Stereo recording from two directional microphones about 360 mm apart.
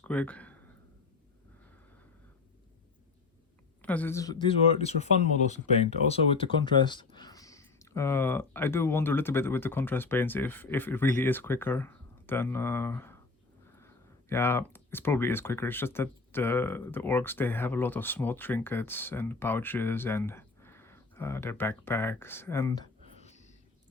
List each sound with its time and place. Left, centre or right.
0.0 s speech: centre
3.8 s speech: centre
23.2 s a sound: centre